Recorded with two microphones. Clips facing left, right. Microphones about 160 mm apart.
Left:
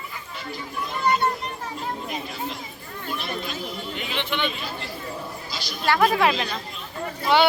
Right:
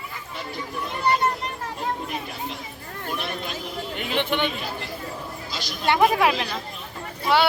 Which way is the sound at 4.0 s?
50° right (ahead or behind).